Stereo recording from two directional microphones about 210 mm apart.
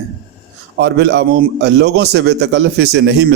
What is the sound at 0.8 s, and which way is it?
A man's voice, 55° right (ahead or behind).